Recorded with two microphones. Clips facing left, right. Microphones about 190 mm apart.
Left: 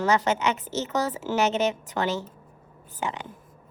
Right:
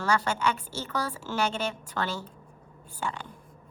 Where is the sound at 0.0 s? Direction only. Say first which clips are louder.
Left 4 dB; 20° left (ahead or behind).